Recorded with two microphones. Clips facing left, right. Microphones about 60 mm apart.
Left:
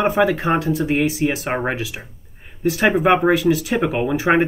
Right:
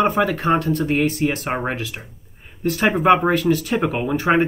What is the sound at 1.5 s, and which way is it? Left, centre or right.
Speech, centre.